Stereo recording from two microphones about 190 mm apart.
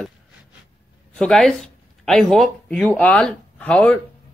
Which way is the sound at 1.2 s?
Centre (ahead or behind).